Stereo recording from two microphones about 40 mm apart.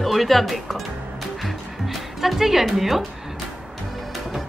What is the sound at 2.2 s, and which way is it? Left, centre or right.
Speech, centre.